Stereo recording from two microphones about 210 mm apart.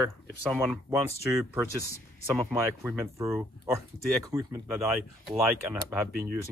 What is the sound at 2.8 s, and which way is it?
Speech, 15° right (ahead or behind).